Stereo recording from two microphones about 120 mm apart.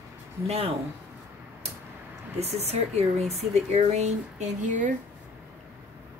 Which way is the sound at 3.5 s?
65° right (ahead or behind).